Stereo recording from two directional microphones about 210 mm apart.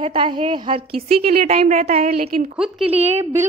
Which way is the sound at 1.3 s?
35° right (ahead or behind).